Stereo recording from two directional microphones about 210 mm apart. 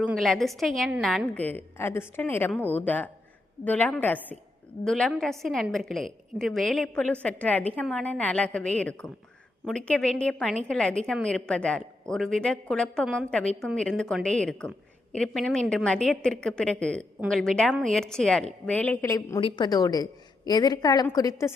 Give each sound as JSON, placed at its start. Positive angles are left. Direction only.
{"t": 0.0, "sound": "a woman's voice", "side_deg": 0}